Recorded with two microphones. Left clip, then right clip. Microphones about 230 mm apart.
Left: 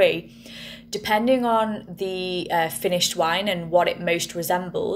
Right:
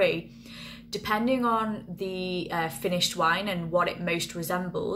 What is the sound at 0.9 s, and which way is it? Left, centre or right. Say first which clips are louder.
A woman's voice: left 6 dB; centre.